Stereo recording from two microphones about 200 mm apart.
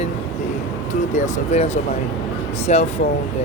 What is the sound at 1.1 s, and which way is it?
Speech, 35° left (ahead or behind).